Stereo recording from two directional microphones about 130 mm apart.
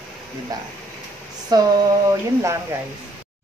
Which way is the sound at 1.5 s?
30° right (ahead or behind).